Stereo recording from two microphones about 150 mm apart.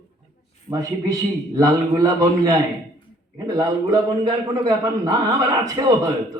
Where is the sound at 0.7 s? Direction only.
20° right (ahead or behind).